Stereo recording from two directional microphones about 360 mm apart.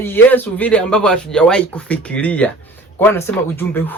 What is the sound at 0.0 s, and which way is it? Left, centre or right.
Speech, centre.